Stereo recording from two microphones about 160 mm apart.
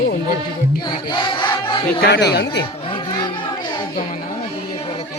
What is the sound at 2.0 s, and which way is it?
Speech, 90° left.